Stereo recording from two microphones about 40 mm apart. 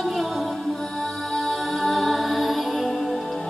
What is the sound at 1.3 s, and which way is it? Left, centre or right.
Music, centre.